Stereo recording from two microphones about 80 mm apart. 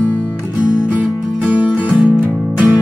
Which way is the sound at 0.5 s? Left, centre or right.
Centre.